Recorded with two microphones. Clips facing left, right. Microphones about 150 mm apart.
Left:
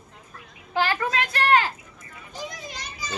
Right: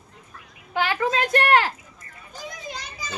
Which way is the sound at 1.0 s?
30° right (ahead or behind).